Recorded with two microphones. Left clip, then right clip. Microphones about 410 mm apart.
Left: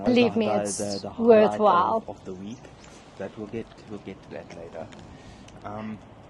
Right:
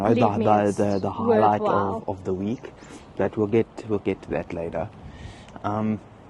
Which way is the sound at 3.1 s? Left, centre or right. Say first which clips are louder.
Right 13 dB; right.